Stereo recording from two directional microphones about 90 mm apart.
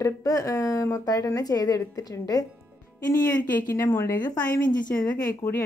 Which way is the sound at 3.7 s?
30° left (ahead or behind).